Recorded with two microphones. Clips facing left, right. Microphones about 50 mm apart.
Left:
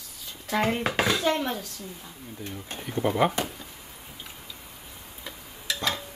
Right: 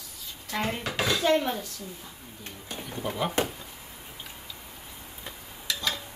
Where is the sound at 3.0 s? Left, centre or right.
Left.